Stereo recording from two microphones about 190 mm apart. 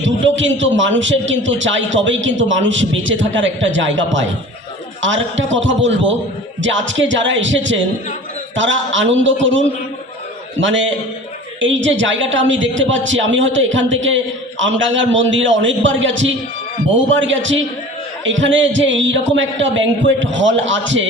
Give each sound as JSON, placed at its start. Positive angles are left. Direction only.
{"t": 0.0, "sound": "a man's voice", "side_deg": -80}